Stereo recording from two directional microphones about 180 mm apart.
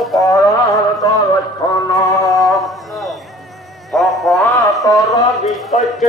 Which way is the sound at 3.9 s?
Centre (ahead or behind).